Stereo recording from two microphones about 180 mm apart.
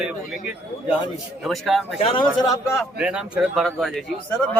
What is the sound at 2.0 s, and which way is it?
Speech, 30° left (ahead or behind).